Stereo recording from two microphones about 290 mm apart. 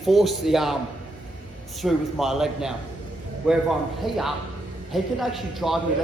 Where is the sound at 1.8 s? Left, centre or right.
Centre.